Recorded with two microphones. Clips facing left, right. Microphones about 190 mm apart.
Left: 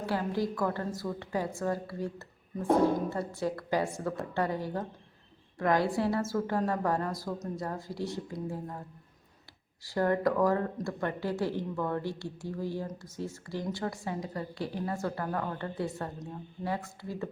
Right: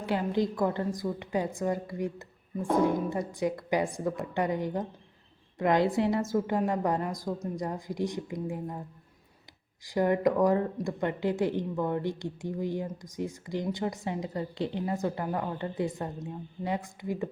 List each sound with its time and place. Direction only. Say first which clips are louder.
0.0 s a woman's voice: right 3 dB; 20° right (ahead or behind)
9.8 s a woman's voice: right 2 dB; 15° right (ahead or behind)